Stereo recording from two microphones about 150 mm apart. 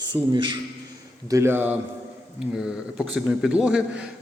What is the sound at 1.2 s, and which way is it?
Speech, 20° right (ahead or behind).